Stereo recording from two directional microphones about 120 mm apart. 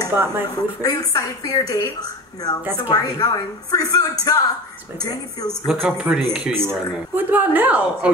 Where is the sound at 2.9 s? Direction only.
30° left (ahead or behind).